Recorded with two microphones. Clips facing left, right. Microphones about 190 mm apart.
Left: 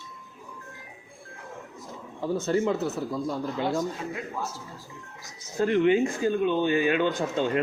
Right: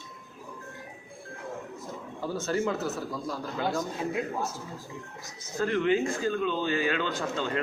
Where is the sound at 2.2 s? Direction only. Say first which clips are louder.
Left 4 dB; 20° left (ahead or behind).